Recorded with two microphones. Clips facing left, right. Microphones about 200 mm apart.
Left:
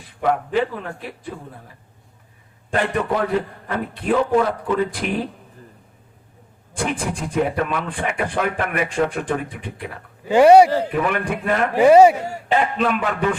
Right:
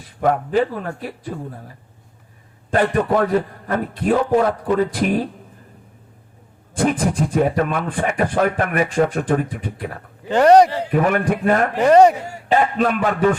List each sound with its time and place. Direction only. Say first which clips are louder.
0.2 s speech: right 2 dB; 45° right (ahead or behind)
2.7 s speech: right 4 dB; 45° right (ahead or behind)
6.7 s speech: right 6 dB; 40° right (ahead or behind)
10.2 s a man's voice: left 1 dB; 10° left (ahead or behind)
10.9 s speech: right 4 dB; 45° right (ahead or behind)
11.8 s a man's voice: left 2 dB; 10° left (ahead or behind)
12.5 s speech: right 2 dB; 45° right (ahead or behind)